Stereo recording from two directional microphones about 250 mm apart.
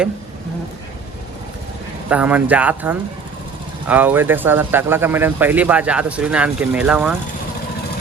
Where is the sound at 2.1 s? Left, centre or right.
Centre.